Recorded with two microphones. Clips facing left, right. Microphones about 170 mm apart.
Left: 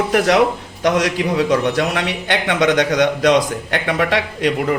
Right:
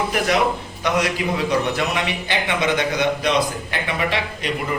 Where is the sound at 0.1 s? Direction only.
80° left.